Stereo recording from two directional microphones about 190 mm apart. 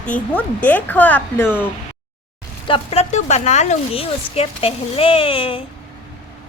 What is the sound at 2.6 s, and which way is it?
A woman's voice, 30° left (ahead or behind).